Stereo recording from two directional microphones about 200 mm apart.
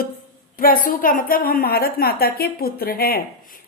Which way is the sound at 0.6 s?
45° left (ahead or behind).